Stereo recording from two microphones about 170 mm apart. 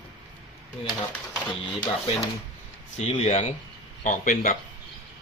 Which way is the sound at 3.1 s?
40° left (ahead or behind).